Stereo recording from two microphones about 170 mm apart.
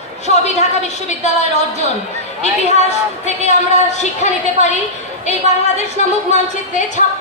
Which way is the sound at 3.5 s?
40° left (ahead or behind).